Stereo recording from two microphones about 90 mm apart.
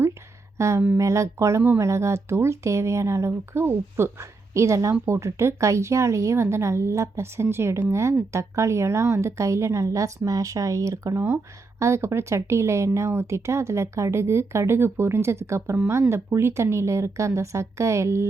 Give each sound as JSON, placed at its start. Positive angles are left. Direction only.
{"t": 0.6, "sound": "speech", "side_deg": -35}